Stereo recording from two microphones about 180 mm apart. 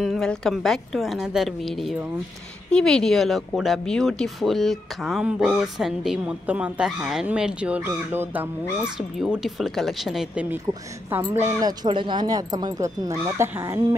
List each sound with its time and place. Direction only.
0.0 s speech: centre (ahead or behind)
10.7 s speech: 15° right (ahead or behind)